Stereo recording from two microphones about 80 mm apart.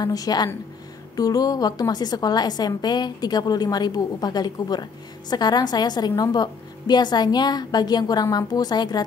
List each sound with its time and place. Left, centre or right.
0.0 s a woman's voice: left